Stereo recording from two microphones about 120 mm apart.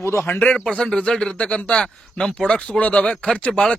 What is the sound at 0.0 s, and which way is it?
Speech, 20° left (ahead or behind).